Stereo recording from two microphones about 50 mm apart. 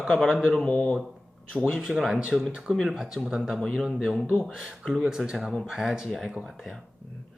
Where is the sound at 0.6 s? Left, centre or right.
Left.